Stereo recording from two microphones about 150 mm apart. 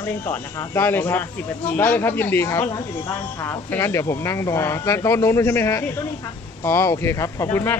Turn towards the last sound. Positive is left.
turn(degrees=20)  # may be behind; listen again after turning